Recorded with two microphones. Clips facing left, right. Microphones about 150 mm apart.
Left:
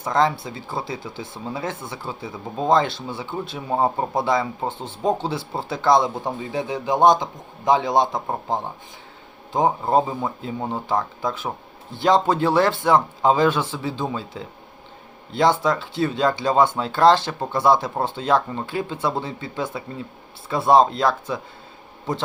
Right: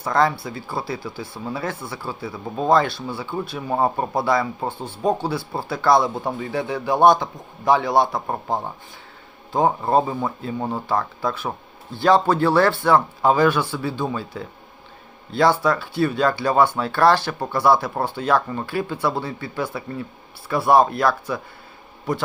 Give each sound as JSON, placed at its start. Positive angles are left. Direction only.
{"t": 0.0, "sound": "speech", "side_deg": 20}